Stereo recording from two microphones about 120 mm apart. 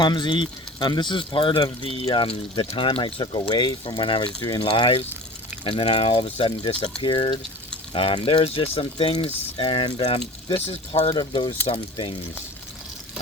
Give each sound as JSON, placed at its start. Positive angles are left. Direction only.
{"t": 0.0, "sound": "speech", "side_deg": 40}